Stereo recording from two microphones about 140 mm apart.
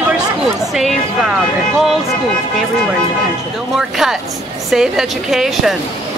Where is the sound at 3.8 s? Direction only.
5° right (ahead or behind).